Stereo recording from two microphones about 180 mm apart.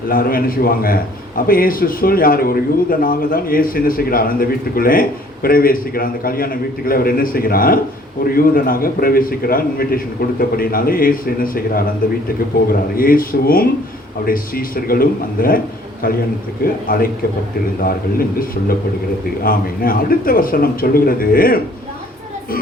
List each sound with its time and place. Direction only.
0.1 s a man's voice: 55° left (ahead or behind)
13.0 s a man's voice: 55° left (ahead or behind)
16.8 s a man's voice: 50° left (ahead or behind)